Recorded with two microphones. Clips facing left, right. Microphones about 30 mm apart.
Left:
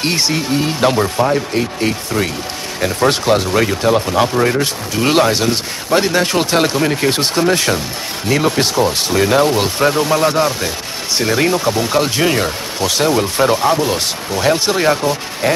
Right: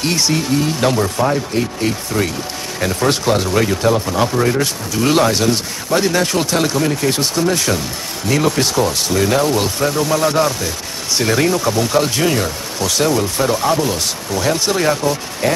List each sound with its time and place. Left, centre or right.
0.0 s speech: left
2.8 s speech: centre
3.1 s speech: left
11.4 s speech: left